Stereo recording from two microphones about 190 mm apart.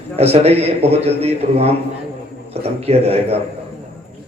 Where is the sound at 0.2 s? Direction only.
35° right (ahead or behind).